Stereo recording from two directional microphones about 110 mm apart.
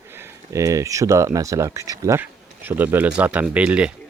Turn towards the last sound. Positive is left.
turn(degrees=-10)  # may be behind; listen again after turning